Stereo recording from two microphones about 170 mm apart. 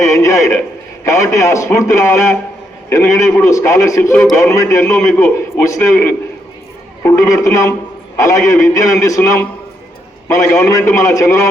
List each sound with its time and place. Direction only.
0.0 s a man's voice: 20° left (ahead or behind)
7.0 s a man's voice: 15° left (ahead or behind)